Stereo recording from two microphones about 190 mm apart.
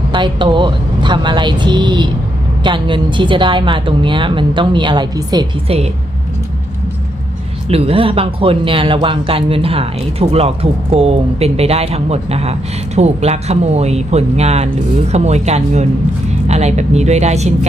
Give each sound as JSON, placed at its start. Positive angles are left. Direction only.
{"t": 0.1, "sound": "a woman's voice", "side_deg": -25}
{"t": 7.7, "sound": "speech", "side_deg": -30}